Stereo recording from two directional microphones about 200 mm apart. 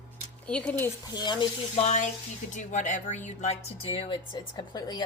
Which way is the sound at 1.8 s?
35° left (ahead or behind).